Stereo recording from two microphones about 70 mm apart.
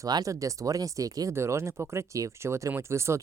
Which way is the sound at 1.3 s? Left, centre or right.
Right.